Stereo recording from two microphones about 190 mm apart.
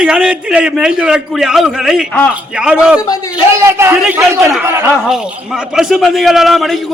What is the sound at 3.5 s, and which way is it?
A man's voice, 15° right (ahead or behind).